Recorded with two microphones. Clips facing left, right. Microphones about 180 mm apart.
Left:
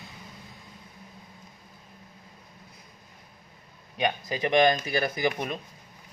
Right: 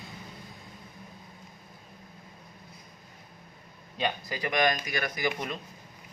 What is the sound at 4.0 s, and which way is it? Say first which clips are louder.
Speech: left 4 dB; 20° left (ahead or behind).